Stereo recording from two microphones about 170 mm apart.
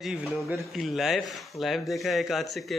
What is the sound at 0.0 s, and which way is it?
Speech, 5° right (ahead or behind).